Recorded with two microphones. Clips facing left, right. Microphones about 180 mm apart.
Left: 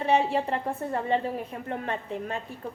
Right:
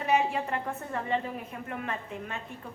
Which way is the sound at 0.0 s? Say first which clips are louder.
Left 3 dB; 30° left (ahead or behind).